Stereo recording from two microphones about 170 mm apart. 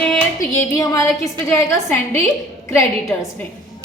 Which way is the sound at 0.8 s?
20° left (ahead or behind).